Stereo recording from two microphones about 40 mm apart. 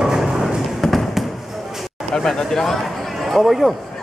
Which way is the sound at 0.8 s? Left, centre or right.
Centre.